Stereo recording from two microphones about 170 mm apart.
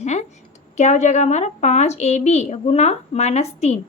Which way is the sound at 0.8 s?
40° left (ahead or behind).